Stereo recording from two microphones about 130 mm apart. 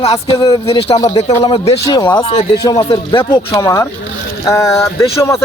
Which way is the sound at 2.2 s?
50° left (ahead or behind).